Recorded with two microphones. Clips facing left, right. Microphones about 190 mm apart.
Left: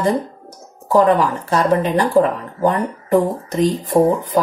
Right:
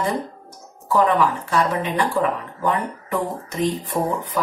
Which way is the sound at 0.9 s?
40° left (ahead or behind).